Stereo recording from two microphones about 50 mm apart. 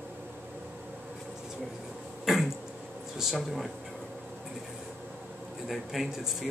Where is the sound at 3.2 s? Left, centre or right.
Centre.